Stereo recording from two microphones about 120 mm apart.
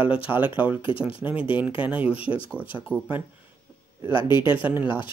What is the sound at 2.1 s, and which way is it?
Speech, 50° left (ahead or behind).